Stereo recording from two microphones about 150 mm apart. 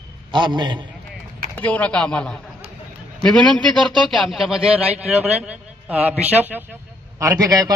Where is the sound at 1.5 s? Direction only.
10° left (ahead or behind); by 5.0 s 10° right (ahead or behind).